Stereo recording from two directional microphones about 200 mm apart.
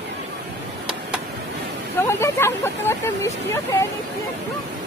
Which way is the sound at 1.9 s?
15° left (ahead or behind).